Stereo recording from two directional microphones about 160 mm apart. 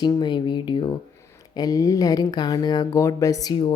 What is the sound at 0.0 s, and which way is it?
Speech, 25° left (ahead or behind).